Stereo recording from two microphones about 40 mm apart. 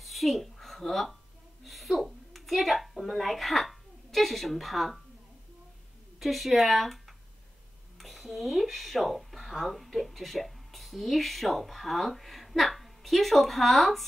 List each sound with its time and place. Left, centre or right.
0.0 s a sound: centre
1.6 s a woman's voice: centre
6.1 s speech: centre